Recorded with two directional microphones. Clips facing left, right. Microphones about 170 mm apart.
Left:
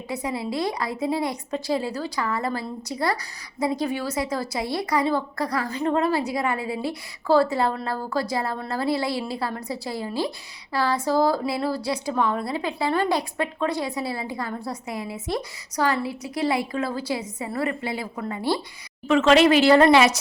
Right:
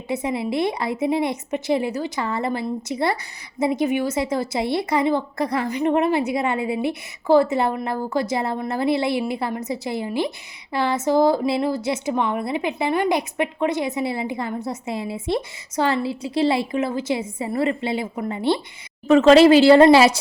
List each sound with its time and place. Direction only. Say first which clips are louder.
0.1 s speech: right 4 dB; 25° right (ahead or behind)
19.0 s speech: right 5 dB; 40° right (ahead or behind)